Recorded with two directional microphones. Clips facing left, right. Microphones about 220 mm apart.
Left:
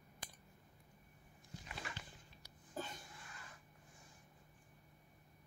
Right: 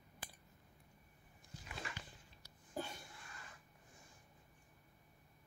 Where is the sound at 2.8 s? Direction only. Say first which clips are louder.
Right 2 dB; 10° right (ahead or behind).